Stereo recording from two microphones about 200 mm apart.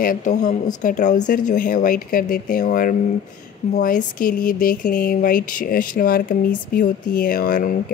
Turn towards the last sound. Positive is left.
turn(degrees=45)  # may be behind; listen again after turning